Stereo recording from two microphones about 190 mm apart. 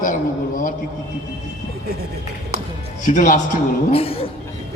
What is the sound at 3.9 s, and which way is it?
Speech, 30° left (ahead or behind).